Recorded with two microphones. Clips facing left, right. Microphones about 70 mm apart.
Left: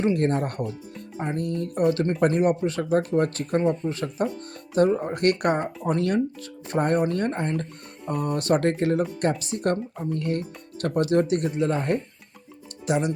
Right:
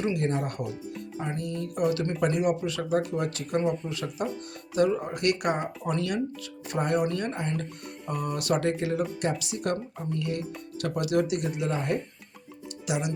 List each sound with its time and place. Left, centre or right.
0.0 s speech: left